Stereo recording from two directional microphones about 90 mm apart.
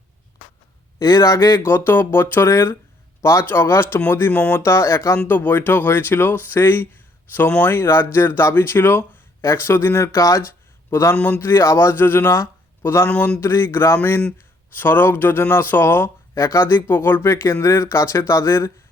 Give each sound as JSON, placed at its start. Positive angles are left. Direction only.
{"t": 0.9, "sound": "speech", "side_deg": 40}
{"t": 4.6, "sound": "speech", "side_deg": 30}
{"t": 13.1, "sound": "speech", "side_deg": 15}
{"t": 13.4, "sound": "speech", "side_deg": 30}